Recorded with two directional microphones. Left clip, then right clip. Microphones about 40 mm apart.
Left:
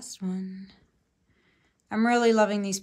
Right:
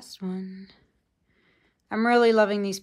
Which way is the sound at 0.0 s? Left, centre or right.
Left.